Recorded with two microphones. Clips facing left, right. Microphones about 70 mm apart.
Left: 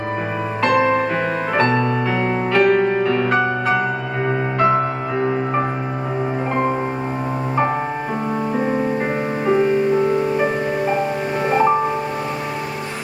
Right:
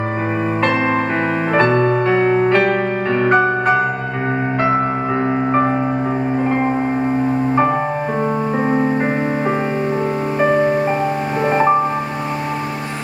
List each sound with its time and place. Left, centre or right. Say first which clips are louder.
1.5 s music: right 4 dB; right
4.7 s music: right 2 dB; right